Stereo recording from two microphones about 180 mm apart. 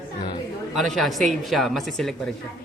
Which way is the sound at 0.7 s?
Centre (ahead or behind).